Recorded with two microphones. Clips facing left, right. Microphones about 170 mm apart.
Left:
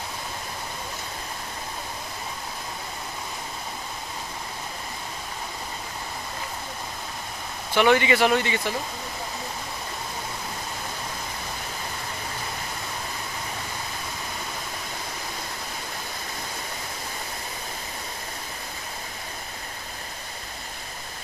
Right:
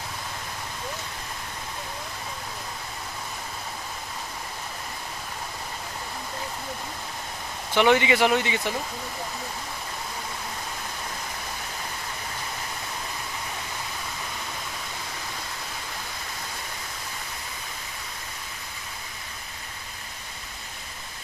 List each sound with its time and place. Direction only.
7.7 s speech: 15° right (ahead or behind)